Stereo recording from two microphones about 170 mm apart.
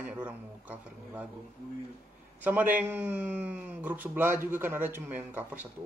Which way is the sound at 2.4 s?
10° right (ahead or behind).